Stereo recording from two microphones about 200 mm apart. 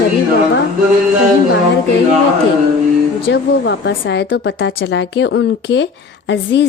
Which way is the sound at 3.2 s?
60° left (ahead or behind).